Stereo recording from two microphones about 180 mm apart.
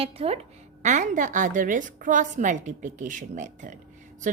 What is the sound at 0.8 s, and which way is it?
A woman's voice, 45° right (ahead or behind).